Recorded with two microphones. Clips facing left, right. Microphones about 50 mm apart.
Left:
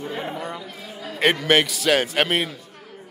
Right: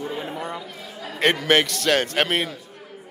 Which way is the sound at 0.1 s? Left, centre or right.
Centre.